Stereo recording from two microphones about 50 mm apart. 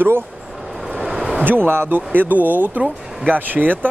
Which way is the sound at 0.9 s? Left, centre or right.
Centre.